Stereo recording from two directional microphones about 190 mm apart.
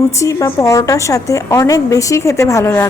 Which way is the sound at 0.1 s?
15° left (ahead or behind).